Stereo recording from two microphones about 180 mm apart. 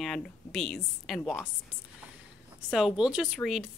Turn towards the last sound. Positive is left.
turn(degrees=0)  # may be behind; listen again after turning